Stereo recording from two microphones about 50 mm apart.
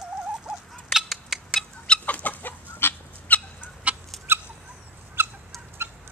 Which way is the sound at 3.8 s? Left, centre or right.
Right.